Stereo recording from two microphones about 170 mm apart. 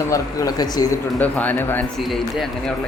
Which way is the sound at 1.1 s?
10° left (ahead or behind).